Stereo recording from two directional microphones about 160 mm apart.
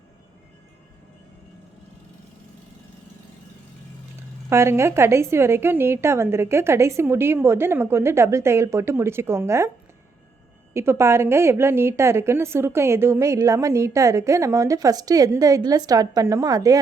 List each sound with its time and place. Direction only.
4.4 s a woman's voice: 15° right (ahead or behind)
10.8 s a woman's voice: 15° right (ahead or behind)